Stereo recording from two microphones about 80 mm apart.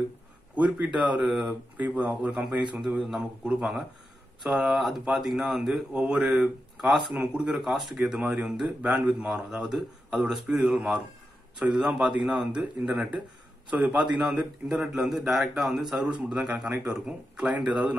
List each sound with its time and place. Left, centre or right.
0.6 s a man's voice: centre